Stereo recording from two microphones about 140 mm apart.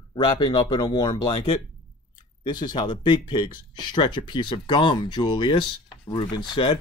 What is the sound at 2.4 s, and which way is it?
Speech, 30° left (ahead or behind).